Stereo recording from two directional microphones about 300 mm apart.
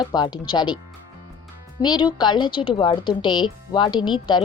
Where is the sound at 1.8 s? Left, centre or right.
Centre.